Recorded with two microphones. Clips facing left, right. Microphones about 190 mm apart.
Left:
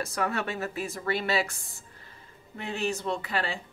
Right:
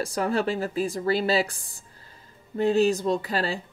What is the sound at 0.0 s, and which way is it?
Speech, 30° right (ahead or behind).